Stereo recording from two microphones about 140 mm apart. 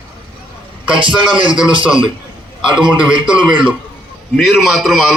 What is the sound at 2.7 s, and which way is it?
Speech, 35° right (ahead or behind).